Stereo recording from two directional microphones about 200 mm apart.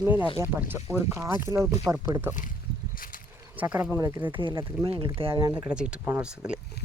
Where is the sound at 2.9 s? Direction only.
45° left (ahead or behind).